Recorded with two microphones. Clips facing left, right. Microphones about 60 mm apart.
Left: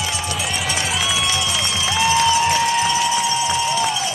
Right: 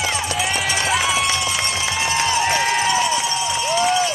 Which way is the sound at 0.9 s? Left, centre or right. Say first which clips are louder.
Right 6 dB; right.